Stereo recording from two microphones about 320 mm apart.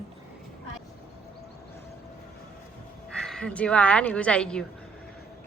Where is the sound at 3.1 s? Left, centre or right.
Centre.